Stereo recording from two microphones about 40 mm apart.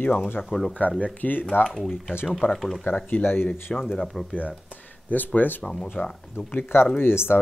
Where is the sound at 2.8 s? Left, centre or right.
Left.